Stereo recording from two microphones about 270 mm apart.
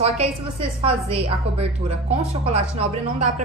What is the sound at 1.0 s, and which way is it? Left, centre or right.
Speech, right.